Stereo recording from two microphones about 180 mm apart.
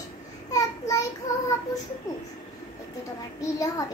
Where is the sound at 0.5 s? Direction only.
20° left (ahead or behind).